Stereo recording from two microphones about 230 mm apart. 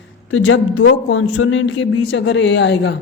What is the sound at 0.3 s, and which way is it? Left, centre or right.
Speech, left.